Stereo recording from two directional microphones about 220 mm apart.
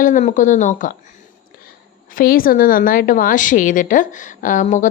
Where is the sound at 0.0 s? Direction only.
35° left (ahead or behind).